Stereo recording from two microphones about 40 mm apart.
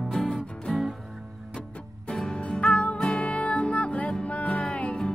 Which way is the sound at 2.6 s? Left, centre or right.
Left.